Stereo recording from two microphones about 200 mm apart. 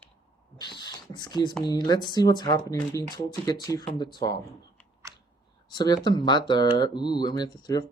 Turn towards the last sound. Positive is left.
turn(degrees=20)  # may be behind; listen again after turning